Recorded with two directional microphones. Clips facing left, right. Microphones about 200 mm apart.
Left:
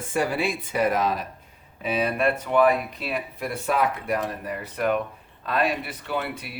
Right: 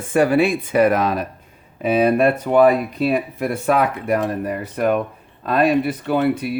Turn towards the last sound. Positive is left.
turn(degrees=-45)  # may be behind; listen again after turning